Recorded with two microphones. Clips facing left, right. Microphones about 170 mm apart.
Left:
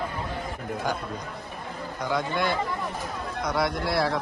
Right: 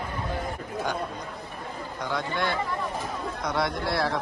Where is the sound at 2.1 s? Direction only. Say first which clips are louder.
Left 2 dB; 5° left (ahead or behind).